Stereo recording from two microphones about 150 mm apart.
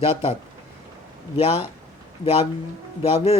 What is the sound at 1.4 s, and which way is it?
Speech, 40° left (ahead or behind).